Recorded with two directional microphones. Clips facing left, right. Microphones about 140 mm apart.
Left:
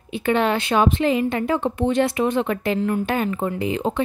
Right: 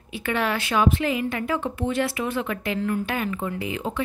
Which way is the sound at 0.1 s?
25° left (ahead or behind).